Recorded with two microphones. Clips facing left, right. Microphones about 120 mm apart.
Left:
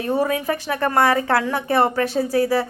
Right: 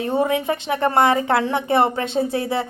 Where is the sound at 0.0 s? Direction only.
25° right (ahead or behind).